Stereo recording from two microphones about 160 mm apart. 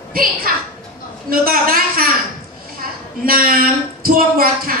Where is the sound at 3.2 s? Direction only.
65° right (ahead or behind).